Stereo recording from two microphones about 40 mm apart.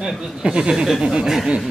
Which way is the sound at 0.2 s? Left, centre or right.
Centre.